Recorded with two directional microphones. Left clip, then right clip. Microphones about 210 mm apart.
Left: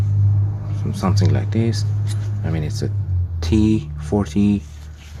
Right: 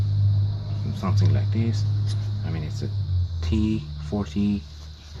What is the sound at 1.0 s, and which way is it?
Speech, 40° left (ahead or behind).